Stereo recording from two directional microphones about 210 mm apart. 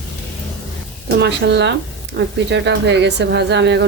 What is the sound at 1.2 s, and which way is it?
Speech, 55° right (ahead or behind).